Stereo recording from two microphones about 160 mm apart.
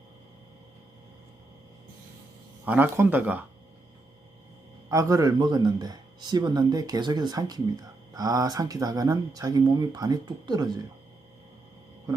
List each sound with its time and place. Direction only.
2.6 s speech: 10° right (ahead or behind)
4.9 s speech: 20° right (ahead or behind)